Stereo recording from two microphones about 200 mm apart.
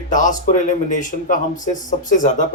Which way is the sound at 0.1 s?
40° left (ahead or behind).